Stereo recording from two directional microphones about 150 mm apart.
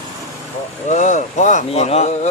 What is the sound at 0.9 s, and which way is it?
Speech, 55° left (ahead or behind).